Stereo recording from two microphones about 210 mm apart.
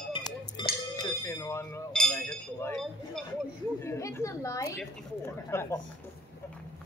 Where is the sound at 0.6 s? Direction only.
20° left (ahead or behind); by 3.2 s 5° left (ahead or behind).